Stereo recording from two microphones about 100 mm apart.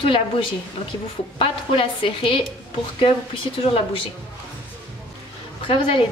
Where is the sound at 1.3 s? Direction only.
60° left (ahead or behind).